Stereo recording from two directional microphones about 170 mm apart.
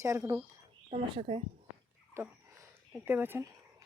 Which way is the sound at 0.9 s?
35° right (ahead or behind).